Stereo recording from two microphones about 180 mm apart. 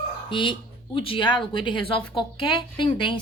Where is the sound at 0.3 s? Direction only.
25° left (ahead or behind).